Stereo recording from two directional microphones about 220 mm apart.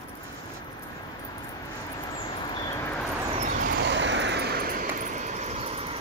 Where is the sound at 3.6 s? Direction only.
50° right (ahead or behind).